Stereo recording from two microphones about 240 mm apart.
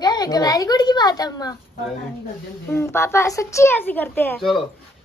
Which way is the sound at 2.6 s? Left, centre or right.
Centre.